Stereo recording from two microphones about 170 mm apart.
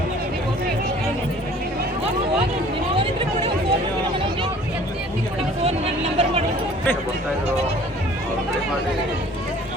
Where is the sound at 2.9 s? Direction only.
30° right (ahead or behind).